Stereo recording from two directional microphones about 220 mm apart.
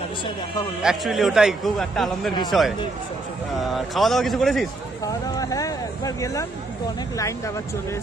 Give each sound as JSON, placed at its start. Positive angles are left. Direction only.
{"t": 0.8, "sound": "a man's voice", "side_deg": 0}
{"t": 5.0, "sound": "speech", "side_deg": 15}